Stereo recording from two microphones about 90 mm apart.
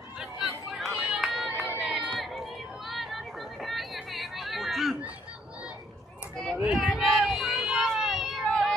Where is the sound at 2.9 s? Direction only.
Centre (ahead or behind).